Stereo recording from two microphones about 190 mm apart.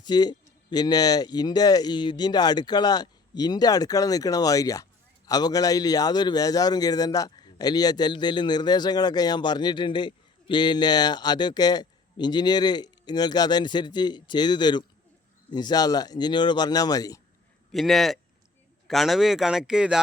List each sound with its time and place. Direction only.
0.0 s speech: 20° left (ahead or behind)
17.7 s speech: centre (ahead or behind)